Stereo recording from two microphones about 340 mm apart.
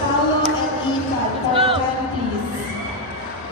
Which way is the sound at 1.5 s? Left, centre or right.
Centre.